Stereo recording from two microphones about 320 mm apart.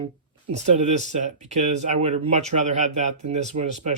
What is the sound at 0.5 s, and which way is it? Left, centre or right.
Speech, right.